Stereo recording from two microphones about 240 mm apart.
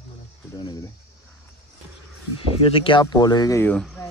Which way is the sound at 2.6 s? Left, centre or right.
Left.